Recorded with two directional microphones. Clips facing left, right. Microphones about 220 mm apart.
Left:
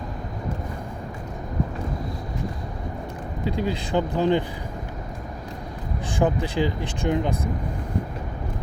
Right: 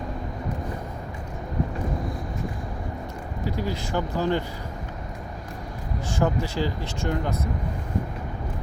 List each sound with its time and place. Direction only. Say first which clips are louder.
3.4 s speech: left 3 dB; 20° left (ahead or behind)
6.1 s speech: left 3 dB; 15° left (ahead or behind)